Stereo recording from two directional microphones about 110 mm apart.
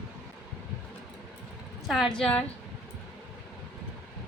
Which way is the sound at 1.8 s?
Centre (ahead or behind).